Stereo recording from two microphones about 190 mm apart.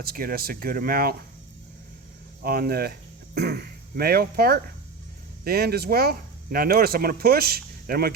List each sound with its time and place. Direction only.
0.0 s speech: 50° right (ahead or behind)
2.4 s speech: 55° right (ahead or behind)